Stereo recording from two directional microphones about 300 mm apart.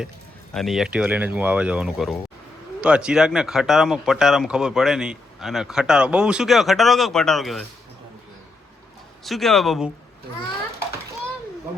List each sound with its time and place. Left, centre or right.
0.5 s speech: centre
9.2 s speech: centre